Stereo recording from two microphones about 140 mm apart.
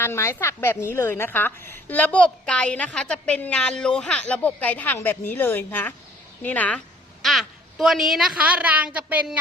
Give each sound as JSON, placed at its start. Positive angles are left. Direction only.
{"t": 0.0, "sound": "a woman's voice", "side_deg": 20}